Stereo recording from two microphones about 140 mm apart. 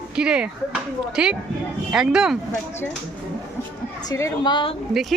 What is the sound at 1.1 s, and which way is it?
Speech, 5° right (ahead or behind).